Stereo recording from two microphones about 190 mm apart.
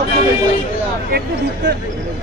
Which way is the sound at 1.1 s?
60° right (ahead or behind).